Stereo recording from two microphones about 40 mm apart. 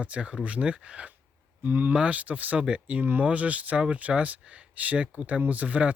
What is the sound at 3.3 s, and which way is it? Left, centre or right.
Speech, right.